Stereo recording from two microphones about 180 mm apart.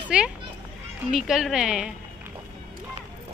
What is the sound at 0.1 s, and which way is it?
A woman's voice, 5° right (ahead or behind).